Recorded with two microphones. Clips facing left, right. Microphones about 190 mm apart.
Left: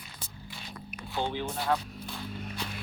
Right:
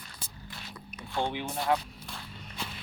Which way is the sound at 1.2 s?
20° right (ahead or behind).